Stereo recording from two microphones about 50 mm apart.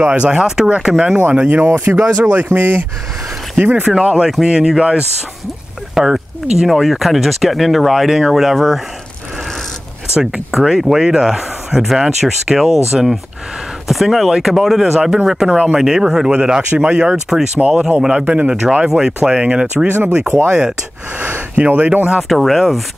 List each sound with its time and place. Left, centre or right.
0.0 s a man's voice: right
1.2 s a man's voice: right
2.5 s speech: right
3.5 s a man's voice: right; by 8.8 s centre
10.5 s speech: centre
15.5 s a man's voice: centre
18.9 s a man's voice: centre
21.2 s a sound: right
21.5 s speech: right
22.3 s speech: centre